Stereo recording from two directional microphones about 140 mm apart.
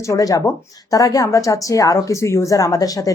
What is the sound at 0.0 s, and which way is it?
Speech, 25° left (ahead or behind).